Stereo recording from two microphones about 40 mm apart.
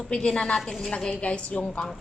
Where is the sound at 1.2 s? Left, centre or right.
Left.